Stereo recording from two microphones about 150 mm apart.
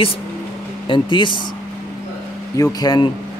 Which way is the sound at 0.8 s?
35° left (ahead or behind).